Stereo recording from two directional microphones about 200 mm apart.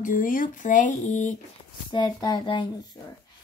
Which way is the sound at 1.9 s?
20° left (ahead or behind).